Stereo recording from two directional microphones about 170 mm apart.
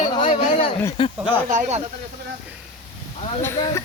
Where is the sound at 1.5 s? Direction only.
45° right (ahead or behind).